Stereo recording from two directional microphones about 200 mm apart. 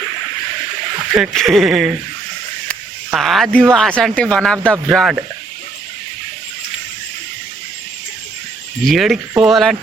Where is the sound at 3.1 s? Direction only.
Centre (ahead or behind).